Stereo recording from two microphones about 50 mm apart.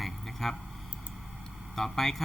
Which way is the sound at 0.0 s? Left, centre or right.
Centre.